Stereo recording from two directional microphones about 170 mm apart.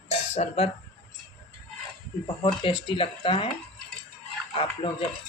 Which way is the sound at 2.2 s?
30° left (ahead or behind).